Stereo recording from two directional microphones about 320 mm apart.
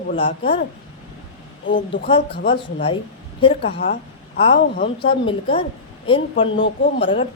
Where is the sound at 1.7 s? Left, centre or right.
Left.